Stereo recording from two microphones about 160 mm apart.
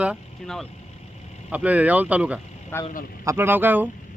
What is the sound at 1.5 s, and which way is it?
Speech, 10° right (ahead or behind).